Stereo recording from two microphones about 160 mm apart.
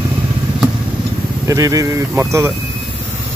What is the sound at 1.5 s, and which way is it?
Speech, 20° right (ahead or behind).